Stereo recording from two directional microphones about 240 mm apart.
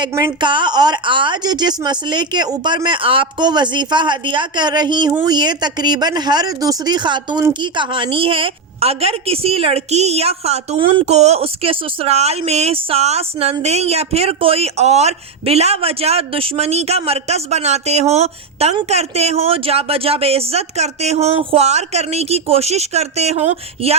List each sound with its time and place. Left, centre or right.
0.0 s a woman's voice: centre